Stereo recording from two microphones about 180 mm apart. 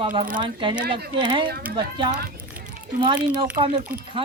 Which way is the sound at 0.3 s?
30° right (ahead or behind).